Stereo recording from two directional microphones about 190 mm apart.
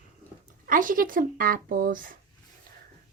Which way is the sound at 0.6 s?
45° right (ahead or behind).